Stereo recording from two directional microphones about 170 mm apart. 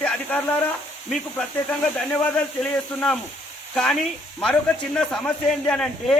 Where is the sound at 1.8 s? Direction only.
5° left (ahead or behind).